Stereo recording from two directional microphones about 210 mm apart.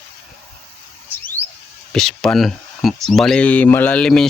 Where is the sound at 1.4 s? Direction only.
30° right (ahead or behind).